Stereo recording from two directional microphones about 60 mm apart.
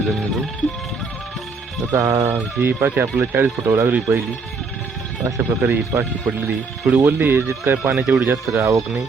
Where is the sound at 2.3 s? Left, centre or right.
Right.